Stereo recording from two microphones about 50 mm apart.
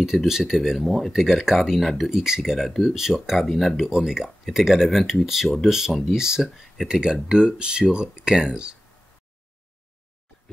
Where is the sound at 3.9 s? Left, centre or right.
Centre.